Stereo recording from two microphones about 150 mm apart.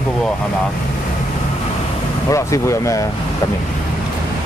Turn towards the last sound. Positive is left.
turn(degrees=20)  # may be behind; listen again after turning